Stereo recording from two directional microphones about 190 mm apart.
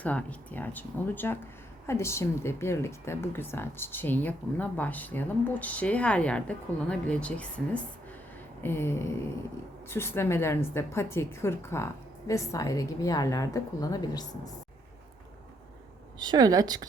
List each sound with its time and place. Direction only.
0.0 s speech: 5° left (ahead or behind)
16.1 s a woman's voice: 20° right (ahead or behind)